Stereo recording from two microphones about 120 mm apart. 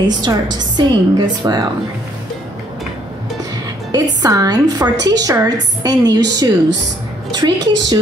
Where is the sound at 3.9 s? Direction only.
30° right (ahead or behind).